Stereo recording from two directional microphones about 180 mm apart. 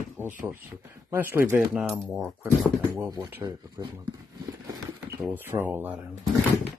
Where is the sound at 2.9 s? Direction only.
20° right (ahead or behind).